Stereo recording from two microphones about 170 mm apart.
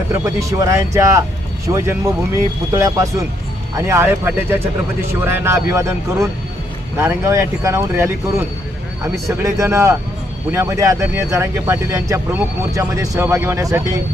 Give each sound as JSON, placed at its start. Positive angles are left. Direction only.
{"t": 0.1, "sound": "speech", "side_deg": -20}
{"t": 7.0, "sound": "speech", "side_deg": -15}
{"t": 9.4, "sound": "speech", "side_deg": -15}